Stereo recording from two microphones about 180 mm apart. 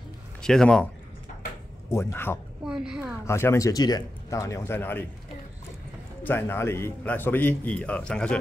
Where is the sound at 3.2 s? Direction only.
15° left (ahead or behind).